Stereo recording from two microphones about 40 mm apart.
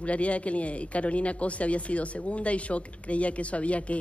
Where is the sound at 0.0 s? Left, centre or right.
Left.